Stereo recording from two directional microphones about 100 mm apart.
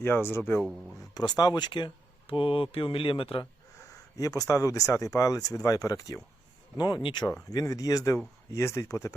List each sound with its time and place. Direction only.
0.0 s speech: 25° left (ahead or behind)
1.1 s speech: 45° left (ahead or behind); by 3.4 s 60° left (ahead or behind)
3.9 s speech: 35° left (ahead or behind)
6.7 s speech: 45° left (ahead or behind)
7.5 s speech: 35° left (ahead or behind)